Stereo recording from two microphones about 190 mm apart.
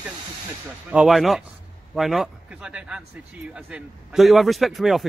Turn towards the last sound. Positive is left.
turn(degrees=0)  # may be behind; listen again after turning